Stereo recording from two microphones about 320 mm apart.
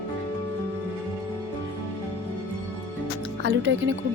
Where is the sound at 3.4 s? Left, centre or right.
Right.